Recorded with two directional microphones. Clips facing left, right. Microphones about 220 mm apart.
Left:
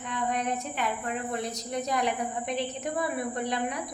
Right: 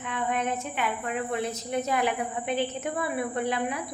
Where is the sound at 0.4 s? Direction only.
Centre (ahead or behind).